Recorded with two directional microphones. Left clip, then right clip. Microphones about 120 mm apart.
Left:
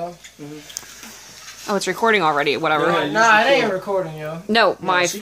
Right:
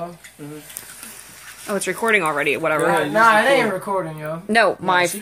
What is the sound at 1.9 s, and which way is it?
Speech, 25° left (ahead or behind).